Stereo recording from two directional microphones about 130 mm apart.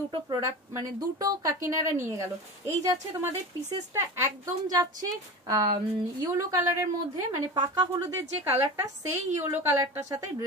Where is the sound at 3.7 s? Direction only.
25° right (ahead or behind).